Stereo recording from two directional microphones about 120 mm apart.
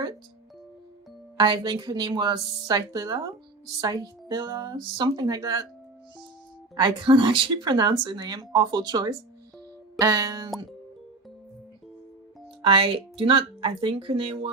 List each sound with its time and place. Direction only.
1.4 s speech: 40° right (ahead or behind)
6.7 s speech: 45° right (ahead or behind)
12.6 s speech: 50° right (ahead or behind)